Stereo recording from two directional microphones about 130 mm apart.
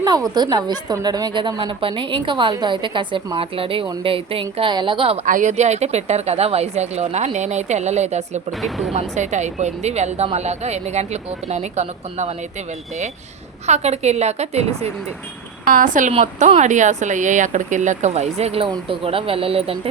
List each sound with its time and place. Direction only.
0.0 s a woman's voice: 30° right (ahead or behind)
5.2 s speech: 75° right (ahead or behind); by 12.3 s 60° right (ahead or behind)
13.7 s speech: 60° right (ahead or behind)
15.7 s speech: 90° right
16.2 s speech: 65° right (ahead or behind); by 19.9 s 50° right (ahead or behind)